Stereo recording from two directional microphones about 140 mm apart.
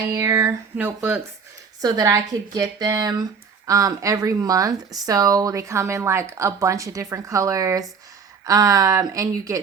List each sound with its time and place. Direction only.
0.1 s speech: 20° right (ahead or behind)
1.8 s speech: 25° right (ahead or behind)